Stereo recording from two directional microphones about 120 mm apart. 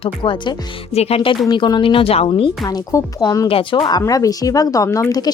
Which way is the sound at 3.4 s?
50° left (ahead or behind).